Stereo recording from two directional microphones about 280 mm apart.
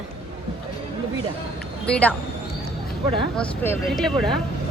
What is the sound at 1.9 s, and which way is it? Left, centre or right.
Speech, centre.